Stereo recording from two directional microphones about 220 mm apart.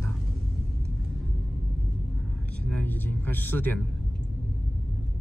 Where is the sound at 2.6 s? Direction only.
5° left (ahead or behind).